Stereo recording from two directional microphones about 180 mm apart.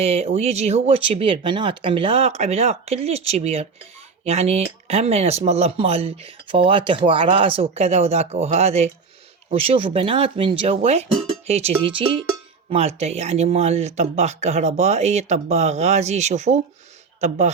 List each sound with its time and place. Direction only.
0.0 s speech: 35° right (ahead or behind)